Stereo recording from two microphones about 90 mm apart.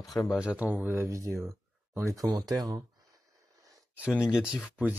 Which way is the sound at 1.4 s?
30° right (ahead or behind).